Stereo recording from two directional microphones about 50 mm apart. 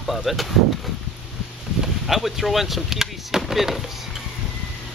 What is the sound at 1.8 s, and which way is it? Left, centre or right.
Speech, centre.